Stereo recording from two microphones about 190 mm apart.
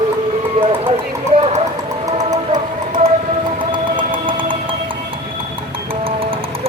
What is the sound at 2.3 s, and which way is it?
Music, 20° right (ahead or behind).